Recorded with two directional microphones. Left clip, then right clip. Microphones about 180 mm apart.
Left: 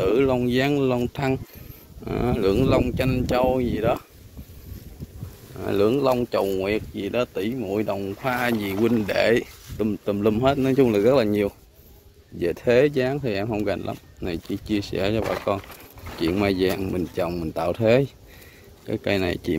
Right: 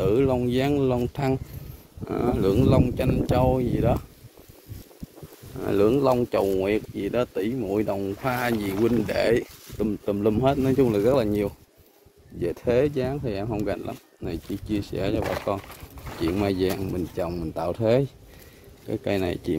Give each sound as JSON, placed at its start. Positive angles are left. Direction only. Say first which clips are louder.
{"t": 0.0, "sound": "speech", "louder": "left 2 dB", "side_deg": -10}
{"t": 2.0, "sound": "speech", "louder": "left 1 dB", "side_deg": -10}
{"t": 5.6, "sound": "speech", "louder": "even", "side_deg": -30}
{"t": 8.8, "sound": "speech", "louder": "left 2 dB", "side_deg": -15}